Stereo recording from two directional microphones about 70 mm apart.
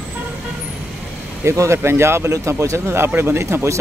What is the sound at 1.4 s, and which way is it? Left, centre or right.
Speech, right.